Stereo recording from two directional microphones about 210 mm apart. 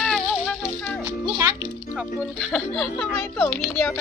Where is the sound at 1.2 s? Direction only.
15° right (ahead or behind).